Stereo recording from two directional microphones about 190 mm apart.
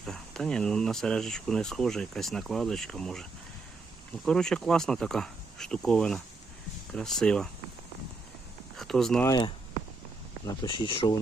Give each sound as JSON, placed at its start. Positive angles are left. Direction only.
{"t": 0.0, "sound": "speech", "side_deg": 0}
{"t": 4.3, "sound": "speech", "side_deg": 5}
{"t": 8.7, "sound": "a sound", "side_deg": 0}
{"t": 9.2, "sound": "speech", "side_deg": 20}
{"t": 10.6, "sound": "speech", "side_deg": 25}